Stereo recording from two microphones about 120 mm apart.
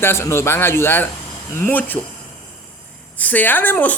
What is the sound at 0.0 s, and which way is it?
Speech, 20° left (ahead or behind).